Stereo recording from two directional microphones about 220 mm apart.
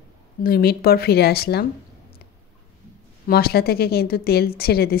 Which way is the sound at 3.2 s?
45° left (ahead or behind).